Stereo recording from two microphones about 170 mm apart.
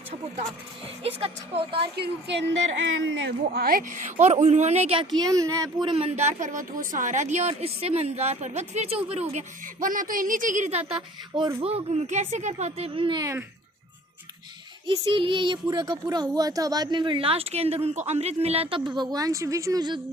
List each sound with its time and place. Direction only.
1.2 s a woman's voice: 35° right (ahead or behind)
2.0 s a woman's voice: 90° right; by 3.9 s 55° right (ahead or behind)
4.2 s a woman's voice: 40° right (ahead or behind)
5.2 s child singing: 20° right (ahead or behind)
5.9 s a woman's voice: 35° right (ahead or behind)
9.8 s a woman's voice: 55° right (ahead or behind); by 13.2 s 30° right (ahead or behind)
14.8 s child singing: 30° right (ahead or behind)
16.1 s a woman's voice: 25° right (ahead or behind)
18.9 s child singing: 20° right (ahead or behind)